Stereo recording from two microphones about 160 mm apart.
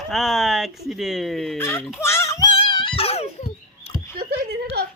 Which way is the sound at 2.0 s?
15° left (ahead or behind).